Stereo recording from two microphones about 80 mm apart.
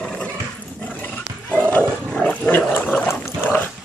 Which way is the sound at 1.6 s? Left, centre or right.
Centre.